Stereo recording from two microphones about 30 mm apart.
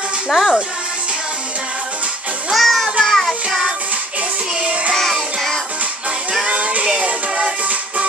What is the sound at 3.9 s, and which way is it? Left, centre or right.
Music, right.